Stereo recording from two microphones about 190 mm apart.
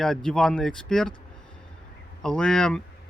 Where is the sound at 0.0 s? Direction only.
5° left (ahead or behind).